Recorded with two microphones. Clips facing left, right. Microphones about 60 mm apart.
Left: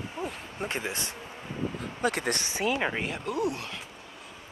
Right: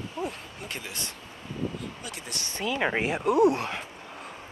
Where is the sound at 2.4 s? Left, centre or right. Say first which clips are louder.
Right 3 dB; centre.